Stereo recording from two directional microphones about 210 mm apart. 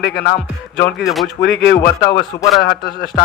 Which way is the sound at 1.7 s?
15° left (ahead or behind).